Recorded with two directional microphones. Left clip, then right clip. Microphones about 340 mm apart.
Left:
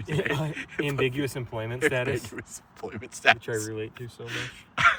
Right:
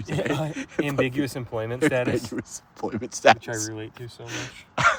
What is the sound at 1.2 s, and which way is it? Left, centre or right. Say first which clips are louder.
Speech: right 2 dB; centre.